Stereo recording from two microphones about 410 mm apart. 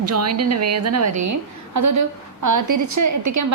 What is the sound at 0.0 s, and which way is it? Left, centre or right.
A woman's voice, right.